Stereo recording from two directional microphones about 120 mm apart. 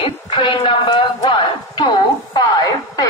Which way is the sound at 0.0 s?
45° left (ahead or behind).